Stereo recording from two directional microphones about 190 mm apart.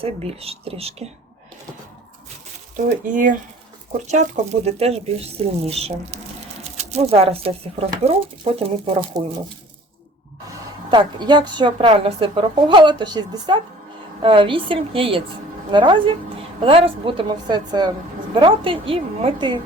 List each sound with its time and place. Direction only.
0.0 s speech: 30° right (ahead or behind)
3.1 s a woman's voice: 45° right (ahead or behind)
10.9 s a woman's voice: 25° right (ahead or behind)